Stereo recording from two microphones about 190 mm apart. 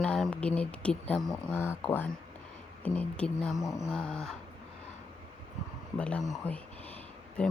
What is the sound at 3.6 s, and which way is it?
Speech, 15° left (ahead or behind).